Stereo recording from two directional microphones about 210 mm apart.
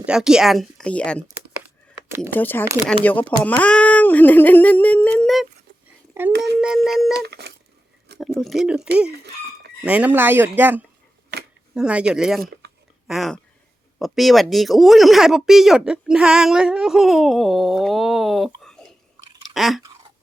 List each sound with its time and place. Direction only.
0.0 s speech: 5° right (ahead or behind)
2.0 s speech: 10° right (ahead or behind)
2.3 s a sound: 10° left (ahead or behind)
6.3 s a sound: 55° right (ahead or behind)
6.6 s a sound: 5° right (ahead or behind)
7.3 s telephone dialing: 50° right (ahead or behind)
8.4 s speech: centre (ahead or behind)
9.1 s fowl: 50° right (ahead or behind)
9.8 s speech: 5° right (ahead or behind)
18.6 s chewing: centre (ahead or behind)